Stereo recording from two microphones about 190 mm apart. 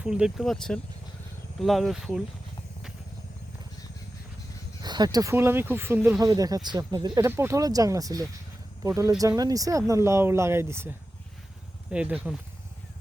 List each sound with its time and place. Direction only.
0.0 s speech: 5° right (ahead or behind)
4.8 s speech: 20° right (ahead or behind); by 12.4 s 5° right (ahead or behind)